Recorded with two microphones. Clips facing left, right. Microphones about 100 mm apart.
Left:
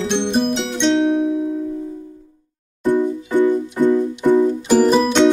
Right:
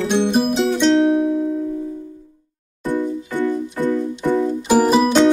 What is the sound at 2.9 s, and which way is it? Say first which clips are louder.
Music: left 4 dB; 15° left (ahead or behind).